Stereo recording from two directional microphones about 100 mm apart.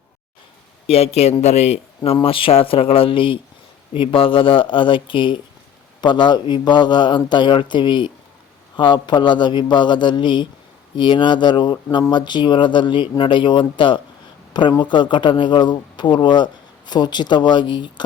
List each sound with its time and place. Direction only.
0.9 s a man's voice: 90° left
2.2 s a man's voice: 65° left (ahead or behind); by 18.0 s 50° left (ahead or behind)